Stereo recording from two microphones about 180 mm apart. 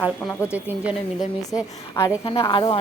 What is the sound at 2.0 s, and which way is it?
Speech, 15° left (ahead or behind).